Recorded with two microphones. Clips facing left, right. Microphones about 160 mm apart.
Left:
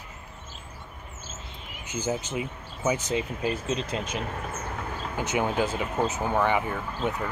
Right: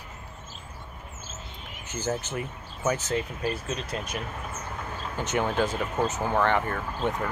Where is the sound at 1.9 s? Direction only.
15° left (ahead or behind).